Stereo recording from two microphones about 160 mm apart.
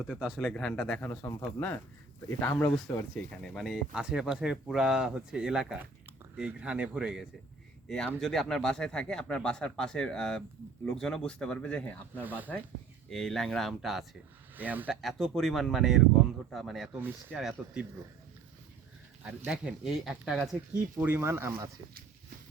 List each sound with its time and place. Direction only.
0.1 s speech: 5° right (ahead or behind)
2.4 s speech: 15° left (ahead or behind)
12.2 s speech: 10° right (ahead or behind)
13.1 s speech: 5° left (ahead or behind)
14.5 s speech: 10° right (ahead or behind)
15.0 s speech: centre (ahead or behind)
17.0 s speech: 15° right (ahead or behind)
17.3 s speech: centre (ahead or behind)
19.5 s speech: 5° right (ahead or behind)
21.0 s speech: 15° right (ahead or behind)